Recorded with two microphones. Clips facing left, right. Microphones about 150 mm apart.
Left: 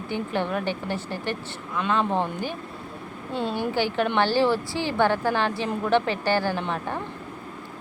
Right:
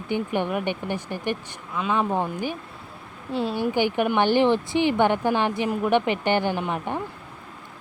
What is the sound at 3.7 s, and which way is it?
Speech, 15° right (ahead or behind).